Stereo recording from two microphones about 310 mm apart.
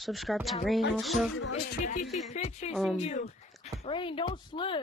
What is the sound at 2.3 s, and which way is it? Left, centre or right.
Speech, left.